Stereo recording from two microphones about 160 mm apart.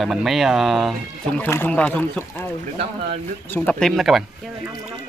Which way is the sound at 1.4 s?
15° left (ahead or behind).